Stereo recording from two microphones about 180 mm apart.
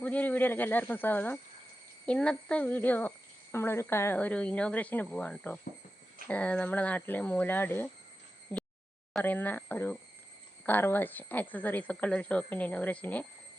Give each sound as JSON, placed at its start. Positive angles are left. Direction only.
{"t": 0.0, "sound": "speech", "side_deg": 10}
{"t": 8.5, "sound": "a sound", "side_deg": 10}
{"t": 9.1, "sound": "speech", "side_deg": 10}